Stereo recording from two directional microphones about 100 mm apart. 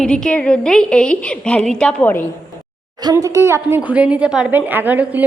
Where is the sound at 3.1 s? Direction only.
30° right (ahead or behind).